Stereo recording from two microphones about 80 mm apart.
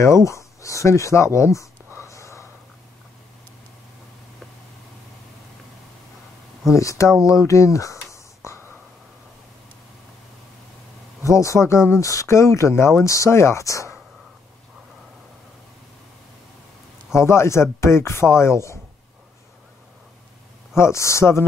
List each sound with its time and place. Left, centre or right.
0.0 s speech: left
2.0 s whispering: left
6.7 s speech: left
8.4 s whispering: left
11.2 s speech: left
17.1 s speech: left
20.7 s speech: left